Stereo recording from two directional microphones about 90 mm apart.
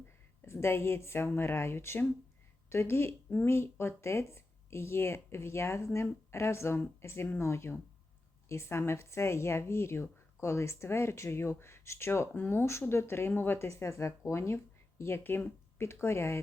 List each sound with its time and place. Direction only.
0.4 s a woman's voice: 30° left (ahead or behind)